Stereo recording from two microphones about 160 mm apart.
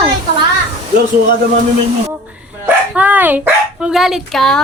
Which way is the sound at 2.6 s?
10° right (ahead or behind).